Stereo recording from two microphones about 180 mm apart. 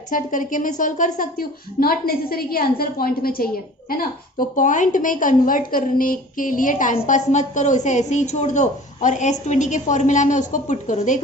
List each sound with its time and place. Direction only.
0.1 s a woman's voice: 45° left (ahead or behind)